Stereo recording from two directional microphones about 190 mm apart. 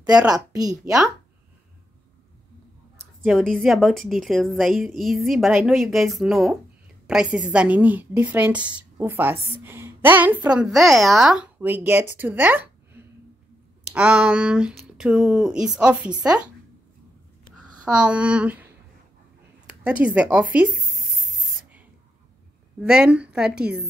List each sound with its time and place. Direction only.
0.0 s speech: 5° right (ahead or behind)
0.6 s speech: 20° right (ahead or behind)
3.3 s a woman's voice: 5° left (ahead or behind)
17.9 s a woman's voice: 5° right (ahead or behind)
19.7 s speech: 5° right (ahead or behind)
22.8 s speech: 5° right (ahead or behind)